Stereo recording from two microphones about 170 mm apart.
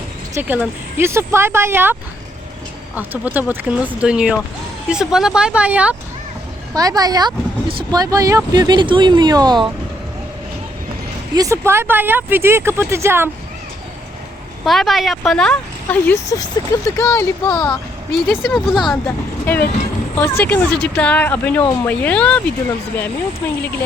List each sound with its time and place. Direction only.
0.3 s speech: 10° right (ahead or behind)
6.7 s speech: 20° right (ahead or behind)
11.3 s speech: 15° right (ahead or behind)
14.6 s speech: centre (ahead or behind); by 17.7 s 15° left (ahead or behind)
18.4 s speech: centre (ahead or behind)
19.0 s speech: 10° left (ahead or behind)